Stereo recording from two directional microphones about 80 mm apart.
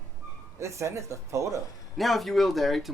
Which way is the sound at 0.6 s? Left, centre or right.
Right.